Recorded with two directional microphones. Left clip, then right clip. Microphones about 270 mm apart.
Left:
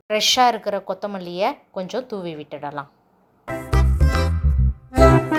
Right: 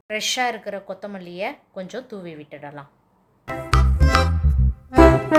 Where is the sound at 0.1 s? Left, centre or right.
Centre.